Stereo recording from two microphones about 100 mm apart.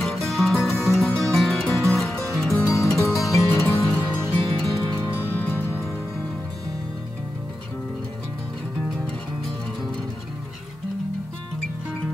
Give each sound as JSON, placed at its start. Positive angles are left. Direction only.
{"t": 0.0, "sound": "music", "side_deg": 0}
{"t": 2.5, "sound": "music", "side_deg": 30}
{"t": 4.3, "sound": "music", "side_deg": 5}
{"t": 5.1, "sound": "music", "side_deg": 20}